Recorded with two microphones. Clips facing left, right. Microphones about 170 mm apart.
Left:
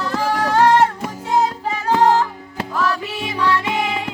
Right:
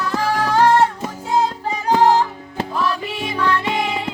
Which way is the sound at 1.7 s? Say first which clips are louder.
Right 1 dB; 15° right (ahead or behind).